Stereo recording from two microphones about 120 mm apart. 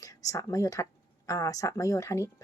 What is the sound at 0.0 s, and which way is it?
Speech, 30° left (ahead or behind).